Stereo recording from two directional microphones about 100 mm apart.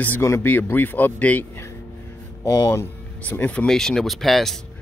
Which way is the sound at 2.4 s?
40° left (ahead or behind).